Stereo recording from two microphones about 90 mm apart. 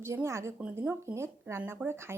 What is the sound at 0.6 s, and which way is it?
Speech, 15° right (ahead or behind).